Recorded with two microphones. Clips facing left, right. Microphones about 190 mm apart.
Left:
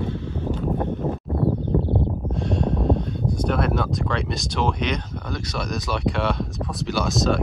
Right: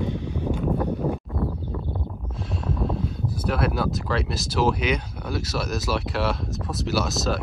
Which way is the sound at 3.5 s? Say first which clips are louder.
Right 1 dB; 5° right (ahead or behind).